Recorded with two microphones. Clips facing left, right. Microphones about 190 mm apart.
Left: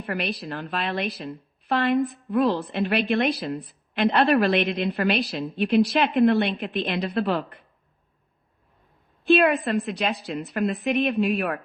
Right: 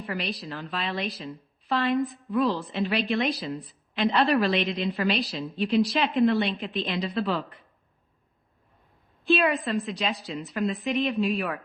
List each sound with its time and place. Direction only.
0.0 s a woman's voice: 60° left (ahead or behind)
9.2 s a woman's voice: 60° left (ahead or behind)